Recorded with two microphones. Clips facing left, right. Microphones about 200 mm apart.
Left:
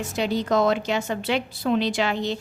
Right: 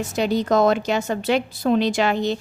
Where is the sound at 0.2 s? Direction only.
45° right (ahead or behind).